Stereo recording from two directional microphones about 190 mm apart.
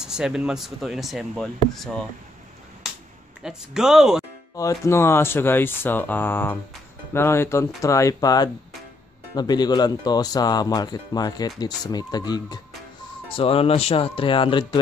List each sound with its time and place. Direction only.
0.0 s speech: 5° right (ahead or behind)
3.4 s speech: 5° right (ahead or behind)
4.6 s speech: 15° left (ahead or behind)